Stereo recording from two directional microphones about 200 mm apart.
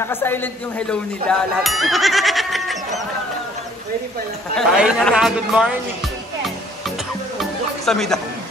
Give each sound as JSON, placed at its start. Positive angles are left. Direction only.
{"t": 0.0, "sound": "a man's voice", "side_deg": 10}
{"t": 1.6, "sound": "goat", "side_deg": 0}
{"t": 4.6, "sound": "speech", "side_deg": 0}
{"t": 7.3, "sound": "music", "side_deg": 0}